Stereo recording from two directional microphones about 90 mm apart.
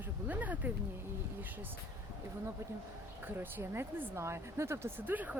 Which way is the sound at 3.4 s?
25° right (ahead or behind).